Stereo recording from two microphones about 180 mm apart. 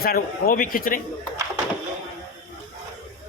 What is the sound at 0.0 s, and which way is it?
A woman's voice, 55° left (ahead or behind).